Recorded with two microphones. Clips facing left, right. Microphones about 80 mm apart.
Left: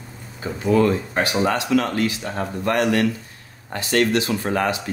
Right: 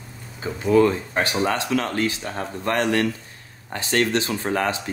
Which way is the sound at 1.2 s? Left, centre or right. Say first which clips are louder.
Left 1 dB; right.